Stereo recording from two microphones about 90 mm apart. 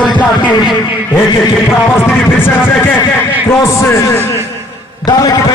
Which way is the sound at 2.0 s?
25° left (ahead or behind).